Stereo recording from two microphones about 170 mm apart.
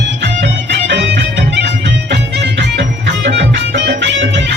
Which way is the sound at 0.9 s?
90° right.